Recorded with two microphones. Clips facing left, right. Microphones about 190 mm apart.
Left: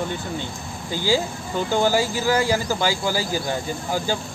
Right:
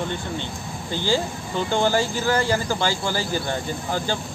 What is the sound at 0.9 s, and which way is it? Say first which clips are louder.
Speech: left 1 dB; 10° left (ahead or behind).